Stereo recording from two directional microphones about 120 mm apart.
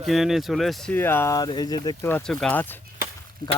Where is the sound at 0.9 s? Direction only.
20° left (ahead or behind); by 2.0 s 35° left (ahead or behind).